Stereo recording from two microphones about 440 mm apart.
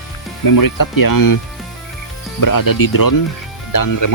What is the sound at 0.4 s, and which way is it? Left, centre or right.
Speech, left.